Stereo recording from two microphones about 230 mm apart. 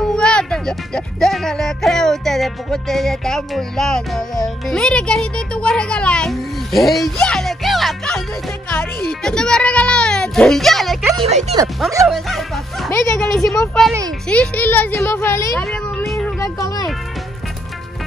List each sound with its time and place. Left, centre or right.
0.0 s a child's voice: centre
11.1 s speech: right
12.1 s a child's voice: centre
15.5 s a sound: centre
16.5 s a child's voice: centre